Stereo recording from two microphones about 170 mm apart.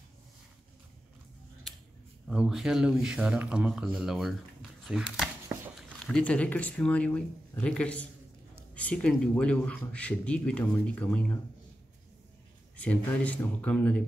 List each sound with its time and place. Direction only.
1.7 s a sound: centre (ahead or behind)
2.2 s speech: 5° right (ahead or behind)
12.7 s speech: 10° left (ahead or behind)